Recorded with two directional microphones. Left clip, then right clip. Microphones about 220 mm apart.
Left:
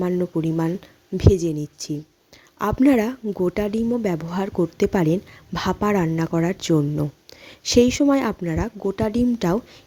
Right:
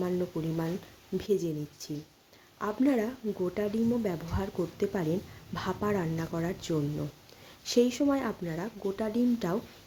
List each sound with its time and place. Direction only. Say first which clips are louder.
0.0 s a woman's voice: left 9 dB; 35° left (ahead or behind)